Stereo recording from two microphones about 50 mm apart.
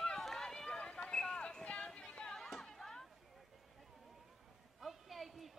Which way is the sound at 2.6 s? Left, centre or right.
Centre.